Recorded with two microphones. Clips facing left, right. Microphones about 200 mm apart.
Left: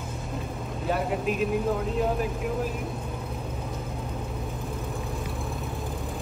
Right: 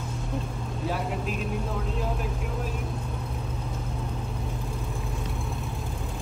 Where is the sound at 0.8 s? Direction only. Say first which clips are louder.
Left 4 dB; centre (ahead or behind).